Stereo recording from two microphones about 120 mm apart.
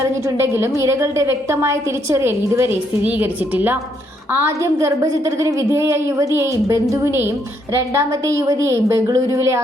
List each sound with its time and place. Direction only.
0.0 s a woman's voice: 25° right (ahead or behind)